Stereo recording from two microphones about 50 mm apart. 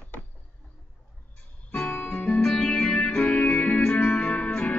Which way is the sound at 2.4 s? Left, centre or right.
Centre.